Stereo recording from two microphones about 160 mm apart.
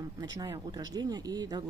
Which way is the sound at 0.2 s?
25° right (ahead or behind).